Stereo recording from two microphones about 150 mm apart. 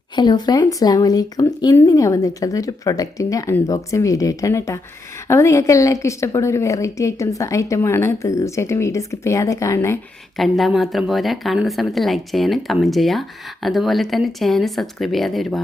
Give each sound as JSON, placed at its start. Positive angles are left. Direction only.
{"t": 0.2, "sound": "a woman's voice", "side_deg": 30}
{"t": 10.3, "sound": "a woman's voice", "side_deg": 0}